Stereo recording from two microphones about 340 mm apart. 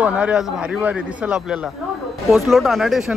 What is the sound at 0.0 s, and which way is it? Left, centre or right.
A man's voice, centre.